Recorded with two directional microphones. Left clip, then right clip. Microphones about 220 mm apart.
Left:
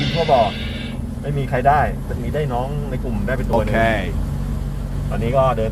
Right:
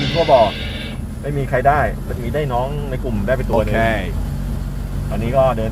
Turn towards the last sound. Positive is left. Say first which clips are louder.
# right 1 dB
turn(degrees=-10)  # may be behind; listen again after turning